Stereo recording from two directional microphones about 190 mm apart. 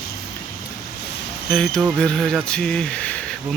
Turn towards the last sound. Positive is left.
turn(degrees=5)  # may be behind; listen again after turning